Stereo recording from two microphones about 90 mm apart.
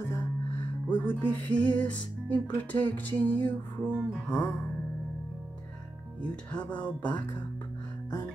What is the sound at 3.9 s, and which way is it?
Music, 10° right (ahead or behind).